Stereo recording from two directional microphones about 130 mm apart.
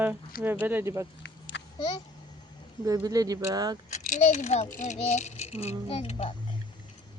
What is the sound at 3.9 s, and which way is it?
Speech, 70° left (ahead or behind).